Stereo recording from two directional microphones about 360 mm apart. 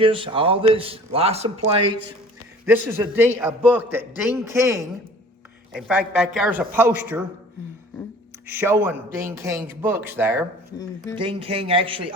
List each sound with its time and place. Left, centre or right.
0.0 s a man's voice: centre
8.4 s a man's voice: centre